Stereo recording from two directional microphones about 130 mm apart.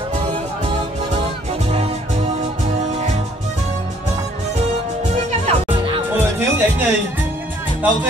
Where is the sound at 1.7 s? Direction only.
55° right (ahead or behind).